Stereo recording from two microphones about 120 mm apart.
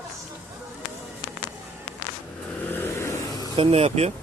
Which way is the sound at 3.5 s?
50° right (ahead or behind).